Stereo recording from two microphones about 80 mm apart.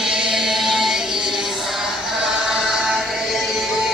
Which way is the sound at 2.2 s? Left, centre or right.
Centre.